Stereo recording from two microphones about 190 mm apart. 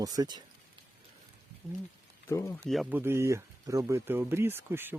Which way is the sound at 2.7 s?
5° right (ahead or behind).